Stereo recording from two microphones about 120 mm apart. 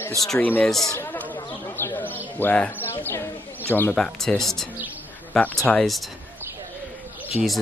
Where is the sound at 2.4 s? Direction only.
15° left (ahead or behind).